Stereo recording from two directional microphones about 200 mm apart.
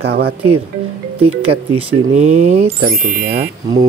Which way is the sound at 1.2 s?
30° right (ahead or behind).